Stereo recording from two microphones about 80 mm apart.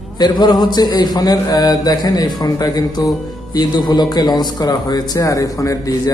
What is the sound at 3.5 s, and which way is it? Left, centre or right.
Speech, left.